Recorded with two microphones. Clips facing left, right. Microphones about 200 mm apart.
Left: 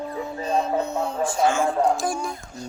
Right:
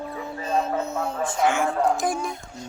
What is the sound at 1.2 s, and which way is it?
Speech, 20° right (ahead or behind).